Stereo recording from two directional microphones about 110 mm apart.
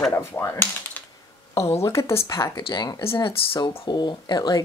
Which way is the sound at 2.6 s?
40° left (ahead or behind).